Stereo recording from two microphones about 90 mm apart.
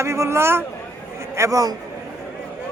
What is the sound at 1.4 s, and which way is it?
Speech, 40° right (ahead or behind).